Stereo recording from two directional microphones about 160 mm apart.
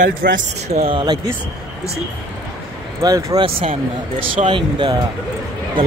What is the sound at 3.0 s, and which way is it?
Speech, 20° right (ahead or behind).